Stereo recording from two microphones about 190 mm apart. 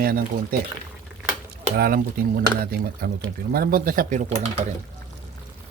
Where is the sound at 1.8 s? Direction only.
50° right (ahead or behind).